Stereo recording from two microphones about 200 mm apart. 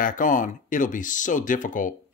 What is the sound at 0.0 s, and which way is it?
Speech, 40° left (ahead or behind).